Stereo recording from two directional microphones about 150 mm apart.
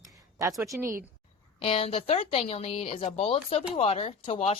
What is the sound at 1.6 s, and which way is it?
Speech, 40° left (ahead or behind).